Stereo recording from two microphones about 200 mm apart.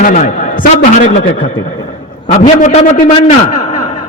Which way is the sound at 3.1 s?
35° left (ahead or behind).